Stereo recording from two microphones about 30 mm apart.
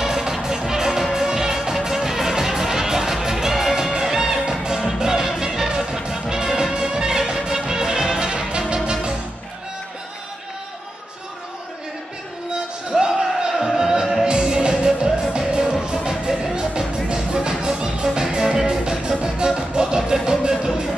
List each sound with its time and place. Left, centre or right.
0.0 s music: centre; by 8.9 s right
12.9 s music: right
14.2 s music: right